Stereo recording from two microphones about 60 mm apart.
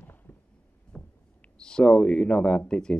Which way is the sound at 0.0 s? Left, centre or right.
Left.